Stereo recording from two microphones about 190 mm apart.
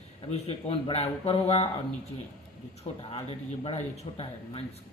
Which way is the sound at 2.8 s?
35° left (ahead or behind).